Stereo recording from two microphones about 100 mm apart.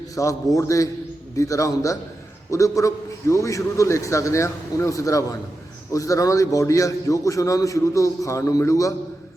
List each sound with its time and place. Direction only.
0.2 s a man's voice: 35° left (ahead or behind)